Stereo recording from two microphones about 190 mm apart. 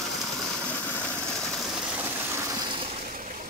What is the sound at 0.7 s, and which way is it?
Vehicle, 10° left (ahead or behind).